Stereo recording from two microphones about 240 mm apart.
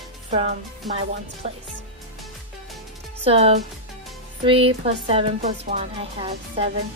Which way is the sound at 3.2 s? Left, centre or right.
Right.